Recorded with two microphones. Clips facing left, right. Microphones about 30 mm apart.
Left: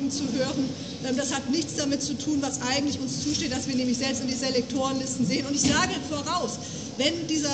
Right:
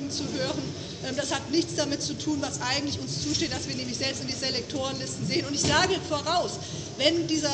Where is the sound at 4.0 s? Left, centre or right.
Right.